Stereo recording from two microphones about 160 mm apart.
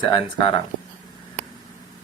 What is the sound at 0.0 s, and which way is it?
Speech, 25° left (ahead or behind).